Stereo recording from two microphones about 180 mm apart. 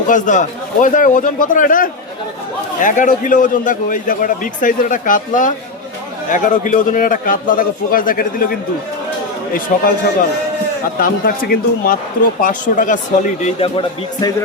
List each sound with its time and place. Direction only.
0.1 s a man's voice: 45° left (ahead or behind)
9.7 s a man's voice: 50° left (ahead or behind)
11.0 s a man's voice: 55° left (ahead or behind); by 14.3 s 30° left (ahead or behind)